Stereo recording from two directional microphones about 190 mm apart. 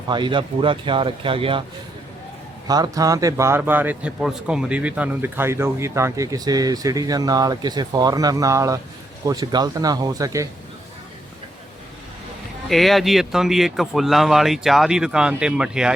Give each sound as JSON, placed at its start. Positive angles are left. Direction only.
{"t": 0.1, "sound": "speech", "side_deg": -25}
{"t": 2.6, "sound": "speech", "side_deg": -20}
{"t": 12.6, "sound": "speech", "side_deg": 0}